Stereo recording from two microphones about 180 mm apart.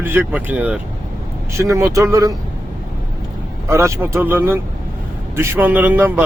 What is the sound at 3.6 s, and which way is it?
Speech, 15° right (ahead or behind).